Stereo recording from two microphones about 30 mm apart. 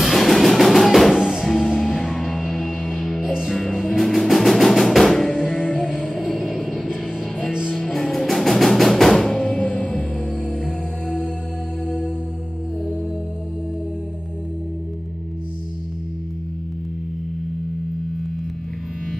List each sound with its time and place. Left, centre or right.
0.0 s music: centre
1.1 s music: centre
1.4 s music: centre
5.8 s music: centre
7.7 s music: centre
11.8 s music: centre